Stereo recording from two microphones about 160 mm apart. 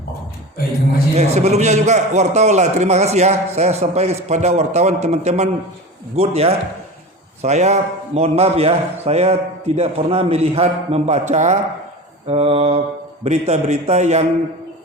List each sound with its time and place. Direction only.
1.1 s a man's voice: 45° right (ahead or behind)